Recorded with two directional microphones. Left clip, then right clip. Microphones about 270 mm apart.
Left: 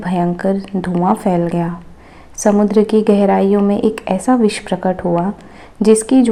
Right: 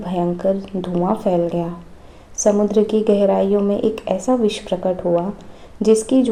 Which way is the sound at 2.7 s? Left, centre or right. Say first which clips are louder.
Left 3 dB; left.